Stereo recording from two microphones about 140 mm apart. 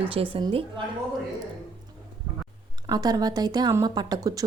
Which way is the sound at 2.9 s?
30° right (ahead or behind).